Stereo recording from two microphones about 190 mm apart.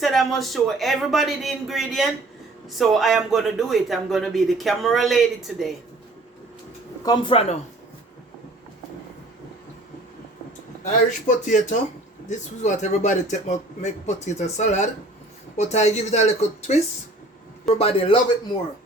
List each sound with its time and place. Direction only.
0.0 s speech: centre (ahead or behind)
7.0 s speech: 20° left (ahead or behind)
10.8 s a man's voice: 40° left (ahead or behind)